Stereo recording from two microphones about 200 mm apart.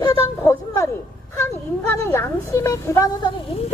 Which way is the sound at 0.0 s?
15° left (ahead or behind).